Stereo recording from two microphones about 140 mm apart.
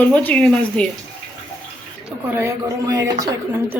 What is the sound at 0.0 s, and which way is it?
Speech, 10° left (ahead or behind).